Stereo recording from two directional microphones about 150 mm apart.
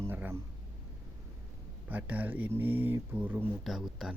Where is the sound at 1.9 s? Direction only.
10° right (ahead or behind).